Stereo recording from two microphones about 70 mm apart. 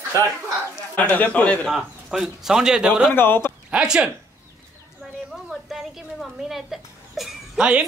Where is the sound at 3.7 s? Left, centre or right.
Centre.